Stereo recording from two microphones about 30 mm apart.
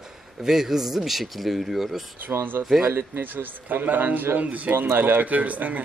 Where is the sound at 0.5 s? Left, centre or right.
Centre.